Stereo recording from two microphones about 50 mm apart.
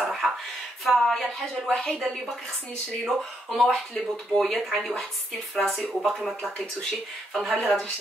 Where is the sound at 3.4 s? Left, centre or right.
Centre.